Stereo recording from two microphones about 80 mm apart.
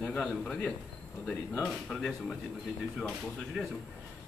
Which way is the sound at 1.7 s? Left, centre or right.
Centre.